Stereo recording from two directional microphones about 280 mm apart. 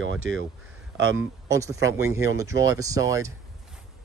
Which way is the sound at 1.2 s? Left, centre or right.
Centre.